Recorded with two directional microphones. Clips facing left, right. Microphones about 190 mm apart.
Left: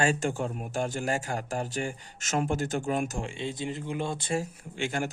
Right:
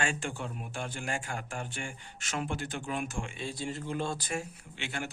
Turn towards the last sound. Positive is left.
turn(degrees=45)  # may be behind; listen again after turning